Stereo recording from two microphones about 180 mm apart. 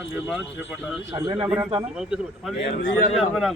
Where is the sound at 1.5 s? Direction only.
5° right (ahead or behind).